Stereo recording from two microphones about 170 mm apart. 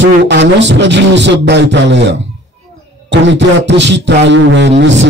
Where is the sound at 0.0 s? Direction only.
90° right.